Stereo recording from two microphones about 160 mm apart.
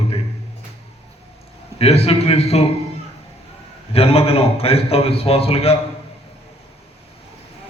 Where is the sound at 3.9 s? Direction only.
35° left (ahead or behind).